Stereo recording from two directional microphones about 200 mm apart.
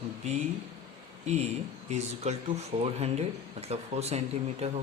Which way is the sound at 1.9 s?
35° right (ahead or behind).